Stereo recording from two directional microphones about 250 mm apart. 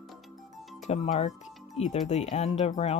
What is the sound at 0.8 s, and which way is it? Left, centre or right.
Speech, left.